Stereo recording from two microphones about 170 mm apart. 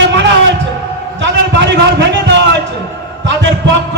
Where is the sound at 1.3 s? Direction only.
90° right.